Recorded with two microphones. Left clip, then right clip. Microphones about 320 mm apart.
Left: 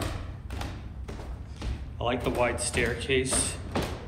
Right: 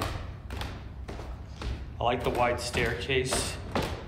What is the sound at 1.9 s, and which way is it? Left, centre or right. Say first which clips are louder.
Speech: right 1 dB; centre.